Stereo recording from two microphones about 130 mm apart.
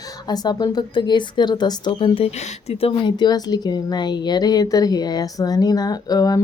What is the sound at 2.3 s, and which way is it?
Speech, 55° left (ahead or behind).